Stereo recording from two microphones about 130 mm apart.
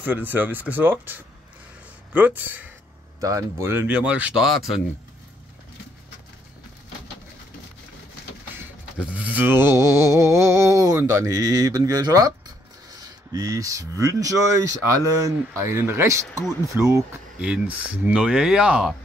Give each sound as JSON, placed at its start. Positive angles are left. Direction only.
{"t": 0.0, "sound": "speech", "side_deg": -15}
{"t": 3.2, "sound": "speech", "side_deg": -25}
{"t": 8.5, "sound": "a sound", "side_deg": -10}
{"t": 17.4, "sound": "speech", "side_deg": -10}